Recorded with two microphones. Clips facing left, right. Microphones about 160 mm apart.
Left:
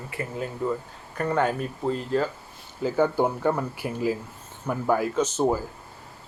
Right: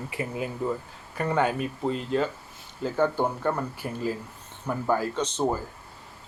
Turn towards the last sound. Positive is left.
turn(degrees=10)  # may be behind; listen again after turning